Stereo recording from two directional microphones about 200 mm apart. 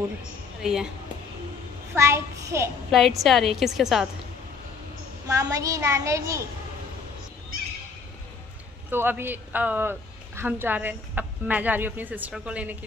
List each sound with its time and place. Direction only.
0.6 s a woman's voice: 5° right (ahead or behind)
2.0 s a woman's voice: 15° right (ahead or behind)
2.9 s a woman's voice: centre (ahead or behind)
5.3 s a woman's voice: 15° right (ahead or behind)
8.9 s a woman's voice: 10° right (ahead or behind)